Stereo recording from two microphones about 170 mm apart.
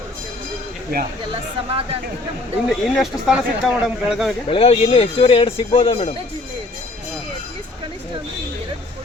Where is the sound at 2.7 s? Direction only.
Centre (ahead or behind).